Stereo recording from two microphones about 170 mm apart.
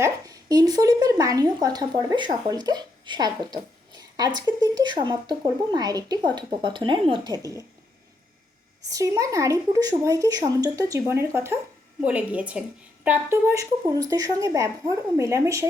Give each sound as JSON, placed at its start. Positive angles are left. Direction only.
{"t": 0.0, "sound": "a woman's voice", "side_deg": -20}
{"t": 8.9, "sound": "a woman's voice", "side_deg": -20}